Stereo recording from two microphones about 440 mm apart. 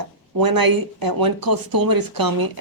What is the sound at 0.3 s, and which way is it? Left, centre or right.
A woman's voice, right.